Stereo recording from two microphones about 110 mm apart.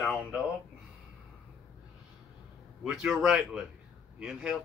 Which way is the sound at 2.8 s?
5° right (ahead or behind).